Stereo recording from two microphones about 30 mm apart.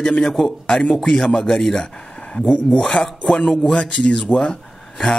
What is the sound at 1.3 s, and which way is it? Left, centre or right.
A man's voice, centre.